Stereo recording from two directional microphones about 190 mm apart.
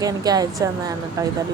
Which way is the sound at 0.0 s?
20° right (ahead or behind).